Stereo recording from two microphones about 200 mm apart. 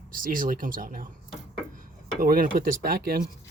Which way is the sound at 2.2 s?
45° right (ahead or behind).